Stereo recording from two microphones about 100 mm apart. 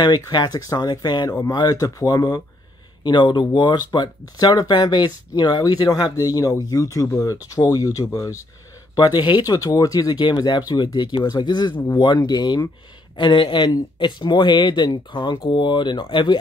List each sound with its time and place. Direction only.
0.0 s speech: 45° left (ahead or behind)
8.9 s speech: 45° left (ahead or behind)
11.7 s speech: 20° left (ahead or behind)
12.0 s speech: 50° left (ahead or behind)
13.1 s speech: 50° left (ahead or behind)